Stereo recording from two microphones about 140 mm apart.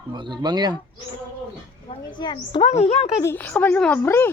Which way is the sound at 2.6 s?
50° left (ahead or behind).